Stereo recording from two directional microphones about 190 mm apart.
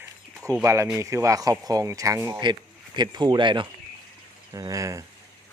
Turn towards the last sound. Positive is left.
turn(degrees=-15)  # may be behind; listen again after turning